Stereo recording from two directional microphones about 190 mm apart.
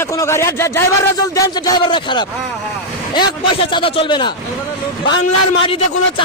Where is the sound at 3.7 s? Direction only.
25° left (ahead or behind).